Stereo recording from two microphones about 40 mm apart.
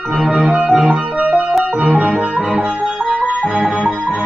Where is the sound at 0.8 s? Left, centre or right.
Right.